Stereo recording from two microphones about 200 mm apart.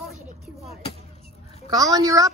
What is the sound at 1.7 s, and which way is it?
Speech, 15° right (ahead or behind).